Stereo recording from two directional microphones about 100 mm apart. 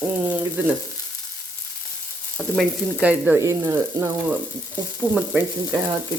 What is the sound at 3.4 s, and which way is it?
Sizzle, 30° right (ahead or behind).